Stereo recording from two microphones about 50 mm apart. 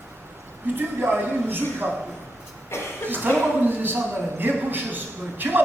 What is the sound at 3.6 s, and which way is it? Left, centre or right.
A man's voice, right.